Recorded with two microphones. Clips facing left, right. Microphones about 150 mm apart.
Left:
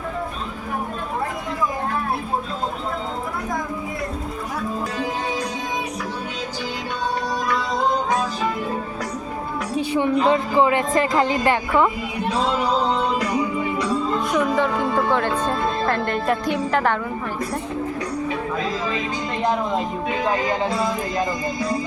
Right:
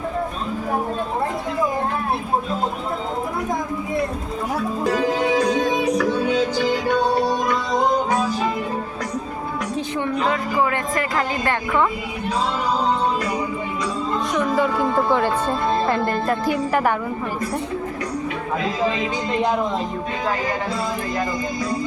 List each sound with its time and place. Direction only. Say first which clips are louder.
5.5 s music: right 8 dB; 90° right
7.2 s music: right 5 dB; 25° right (ahead or behind)
9.7 s music: left 6 dB; 15° left (ahead or behind)
14.3 s speech: right 1 dB; 5° right (ahead or behind)